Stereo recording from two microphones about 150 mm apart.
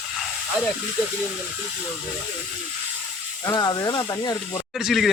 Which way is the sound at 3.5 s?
25° left (ahead or behind).